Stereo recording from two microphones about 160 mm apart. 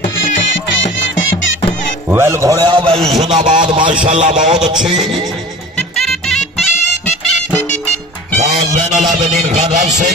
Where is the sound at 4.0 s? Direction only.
50° right (ahead or behind).